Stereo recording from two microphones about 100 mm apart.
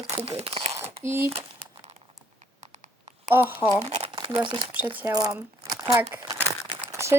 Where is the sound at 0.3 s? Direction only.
85° right.